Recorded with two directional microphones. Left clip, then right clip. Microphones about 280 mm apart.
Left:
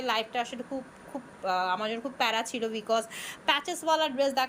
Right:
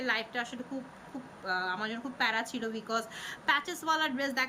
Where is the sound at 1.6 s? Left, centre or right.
Centre.